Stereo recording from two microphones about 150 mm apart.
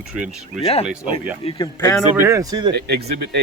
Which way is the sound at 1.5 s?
30° left (ahead or behind).